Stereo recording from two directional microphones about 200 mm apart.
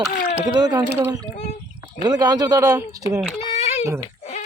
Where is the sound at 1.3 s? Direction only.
35° left (ahead or behind).